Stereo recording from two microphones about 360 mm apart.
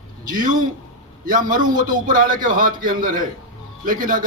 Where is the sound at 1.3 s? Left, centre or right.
Right.